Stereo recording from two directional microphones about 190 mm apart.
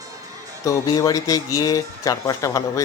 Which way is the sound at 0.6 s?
20° left (ahead or behind).